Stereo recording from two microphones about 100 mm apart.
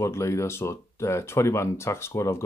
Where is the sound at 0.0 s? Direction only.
30° left (ahead or behind).